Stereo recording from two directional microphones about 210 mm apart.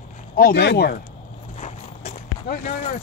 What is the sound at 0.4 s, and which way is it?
Speech, 50° left (ahead or behind).